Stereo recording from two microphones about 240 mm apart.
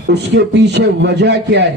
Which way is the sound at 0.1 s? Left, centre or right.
Right.